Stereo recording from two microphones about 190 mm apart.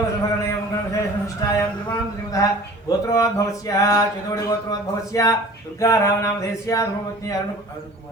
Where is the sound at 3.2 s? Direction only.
20° left (ahead or behind).